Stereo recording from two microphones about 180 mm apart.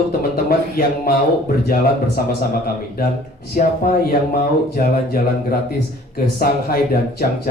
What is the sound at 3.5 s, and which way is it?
A man's voice, 55° left (ahead or behind).